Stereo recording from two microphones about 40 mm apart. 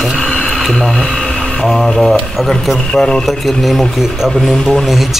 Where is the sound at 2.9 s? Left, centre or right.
Centre.